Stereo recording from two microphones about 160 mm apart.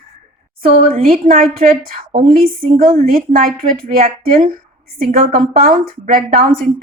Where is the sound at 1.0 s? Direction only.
65° right (ahead or behind).